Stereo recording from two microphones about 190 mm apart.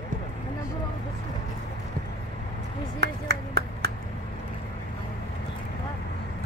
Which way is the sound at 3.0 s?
60° right (ahead or behind).